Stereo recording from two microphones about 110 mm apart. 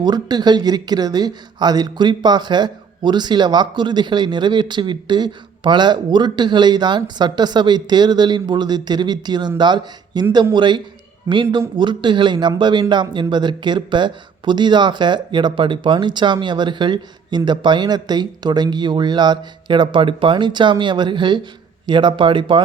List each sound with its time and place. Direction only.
0.0 s speech: 40° right (ahead or behind)